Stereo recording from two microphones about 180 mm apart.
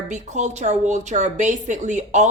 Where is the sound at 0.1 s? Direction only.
40° right (ahead or behind).